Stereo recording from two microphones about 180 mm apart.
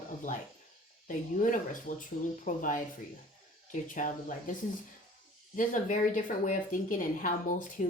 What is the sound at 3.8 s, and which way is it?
Speech, 45° left (ahead or behind).